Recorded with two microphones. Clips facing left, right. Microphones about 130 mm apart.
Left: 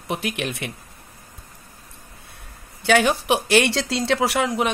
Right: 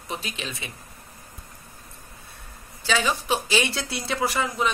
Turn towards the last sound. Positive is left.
turn(degrees=70)  # may be behind; listen again after turning